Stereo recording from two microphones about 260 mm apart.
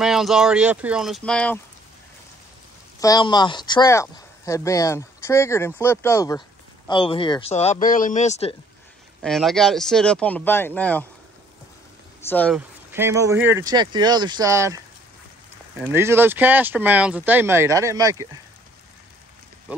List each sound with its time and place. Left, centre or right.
0.0 s speech: centre
3.0 s speech: centre
9.2 s speech: centre
12.2 s speech: centre
12.5 s speech: centre
15.8 s speech: centre